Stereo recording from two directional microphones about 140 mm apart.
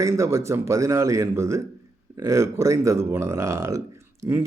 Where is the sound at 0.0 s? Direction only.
20° right (ahead or behind).